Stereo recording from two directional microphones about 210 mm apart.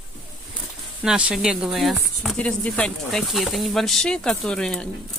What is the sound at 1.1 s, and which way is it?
Speech, 5° right (ahead or behind).